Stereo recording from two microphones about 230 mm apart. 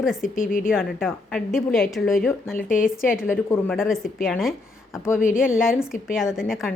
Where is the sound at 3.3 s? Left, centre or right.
Centre.